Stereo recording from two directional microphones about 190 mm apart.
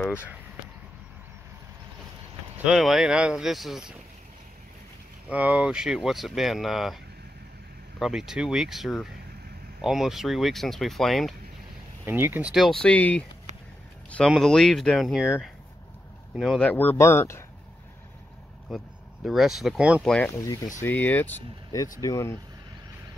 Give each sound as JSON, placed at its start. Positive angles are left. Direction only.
{"t": 2.5, "sound": "speech", "side_deg": -5}
{"t": 5.3, "sound": "speech", "side_deg": -5}
{"t": 8.0, "sound": "speech", "side_deg": 0}
{"t": 12.1, "sound": "speech", "side_deg": -10}
{"t": 16.3, "sound": "speech", "side_deg": 0}
{"t": 19.2, "sound": "speech", "side_deg": 0}
{"t": 20.3, "sound": "speech", "side_deg": 20}